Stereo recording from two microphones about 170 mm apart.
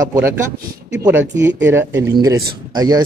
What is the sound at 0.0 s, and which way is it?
Speech, 15° right (ahead or behind).